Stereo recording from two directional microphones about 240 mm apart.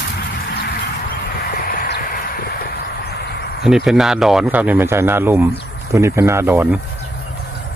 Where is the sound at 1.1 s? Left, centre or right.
Left.